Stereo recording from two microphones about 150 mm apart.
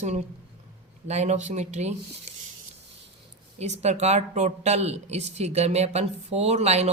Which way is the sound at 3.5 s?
45° right (ahead or behind).